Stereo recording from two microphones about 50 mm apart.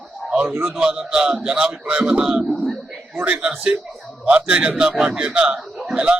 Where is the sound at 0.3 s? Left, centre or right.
Right.